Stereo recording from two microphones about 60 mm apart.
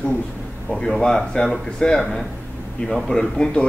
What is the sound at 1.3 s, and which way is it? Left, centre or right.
Speech, centre.